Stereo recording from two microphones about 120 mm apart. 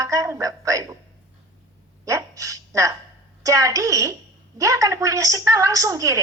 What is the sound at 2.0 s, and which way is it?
A woman's voice, 30° right (ahead or behind).